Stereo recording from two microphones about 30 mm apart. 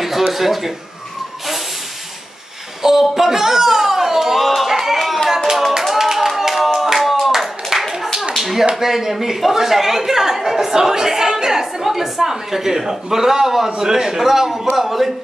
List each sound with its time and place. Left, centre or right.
0.3 s a woman's voice: centre
2.8 s a sound: centre
5.7 s clapping: centre
8.4 s tap: centre
8.7 s a woman's voice: centre